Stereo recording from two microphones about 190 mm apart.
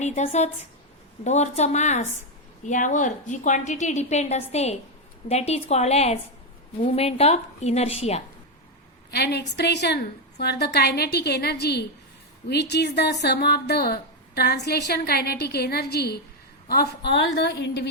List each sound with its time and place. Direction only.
0.0 s a woman's voice: 35° left (ahead or behind)
9.0 s speech: 60° left (ahead or behind)